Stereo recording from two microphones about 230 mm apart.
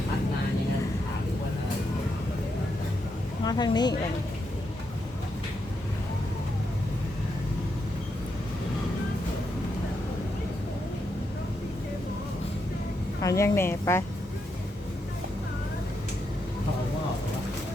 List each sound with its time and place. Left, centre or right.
3.4 s speech: centre
13.2 s speech: centre